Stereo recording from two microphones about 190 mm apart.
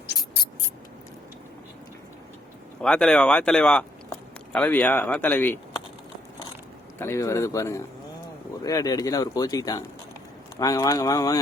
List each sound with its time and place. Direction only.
2.8 s speech: 5° left (ahead or behind)
7.0 s speech: 15° left (ahead or behind)